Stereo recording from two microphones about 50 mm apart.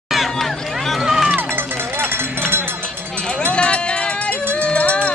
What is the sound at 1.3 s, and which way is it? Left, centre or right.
Music, right.